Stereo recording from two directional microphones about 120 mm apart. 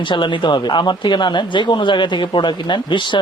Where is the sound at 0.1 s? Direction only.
40° left (ahead or behind).